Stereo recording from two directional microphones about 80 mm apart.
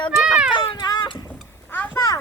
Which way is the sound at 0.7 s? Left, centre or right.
Left.